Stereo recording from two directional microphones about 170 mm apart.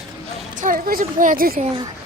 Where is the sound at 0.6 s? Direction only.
55° right (ahead or behind).